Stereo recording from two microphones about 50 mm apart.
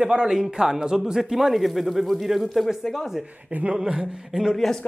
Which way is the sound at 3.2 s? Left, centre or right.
Right.